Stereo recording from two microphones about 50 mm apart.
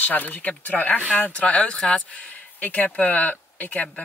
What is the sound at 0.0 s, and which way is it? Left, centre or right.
Speech, left.